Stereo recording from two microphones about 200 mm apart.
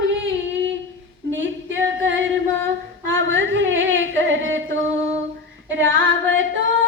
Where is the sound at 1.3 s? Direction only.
70° right (ahead or behind).